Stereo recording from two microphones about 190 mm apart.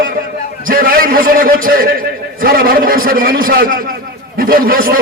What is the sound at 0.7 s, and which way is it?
A man's voice, 50° right (ahead or behind).